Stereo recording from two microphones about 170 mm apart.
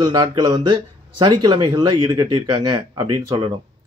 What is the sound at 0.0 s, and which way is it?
Speech, 25° right (ahead or behind).